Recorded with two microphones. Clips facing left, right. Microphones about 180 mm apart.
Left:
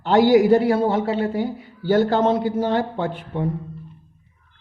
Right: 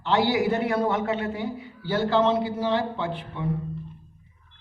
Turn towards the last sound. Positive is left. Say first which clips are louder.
# left 5 dB
turn(degrees=45)  # may be behind; listen again after turning